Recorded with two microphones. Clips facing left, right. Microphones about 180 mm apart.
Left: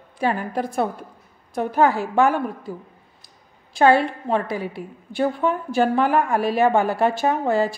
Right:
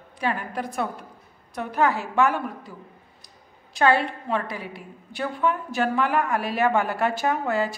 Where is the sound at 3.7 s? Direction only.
35° left (ahead or behind).